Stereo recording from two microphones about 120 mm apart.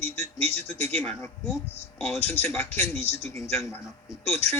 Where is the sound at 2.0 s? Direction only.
20° left (ahead or behind).